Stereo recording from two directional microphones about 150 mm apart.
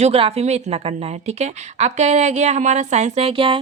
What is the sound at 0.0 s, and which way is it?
A woman's voice, 45° right (ahead or behind).